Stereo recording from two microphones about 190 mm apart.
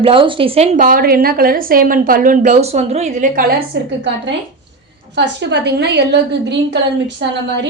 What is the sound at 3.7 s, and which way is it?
Speech, 60° right (ahead or behind).